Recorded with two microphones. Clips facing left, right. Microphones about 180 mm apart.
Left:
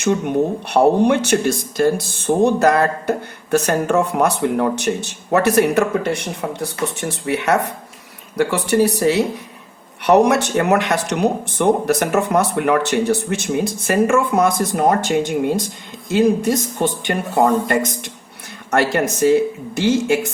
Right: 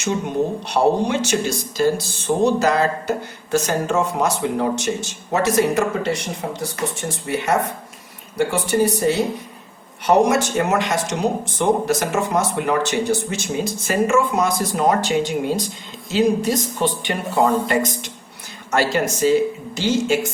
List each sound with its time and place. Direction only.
0.0 s speech: 60° left (ahead or behind)